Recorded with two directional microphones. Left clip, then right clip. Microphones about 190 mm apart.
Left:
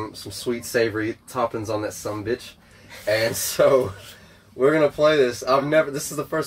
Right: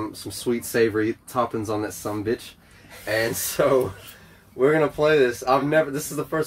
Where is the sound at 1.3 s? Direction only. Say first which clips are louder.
Left 1 dB; 55° right (ahead or behind).